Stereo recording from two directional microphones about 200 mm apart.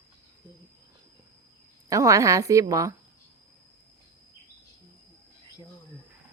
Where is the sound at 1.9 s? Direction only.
15° right (ahead or behind).